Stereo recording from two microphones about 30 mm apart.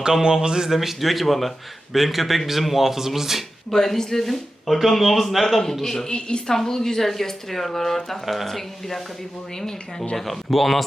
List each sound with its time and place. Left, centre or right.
0.0 s speech: right
0.7 s speech: centre
3.7 s speech: centre
6.1 s a woman's voice: left
6.5 s speech: centre
10.2 s speech: centre